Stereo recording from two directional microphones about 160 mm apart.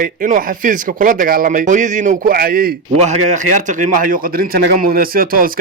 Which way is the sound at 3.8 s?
60° right (ahead or behind).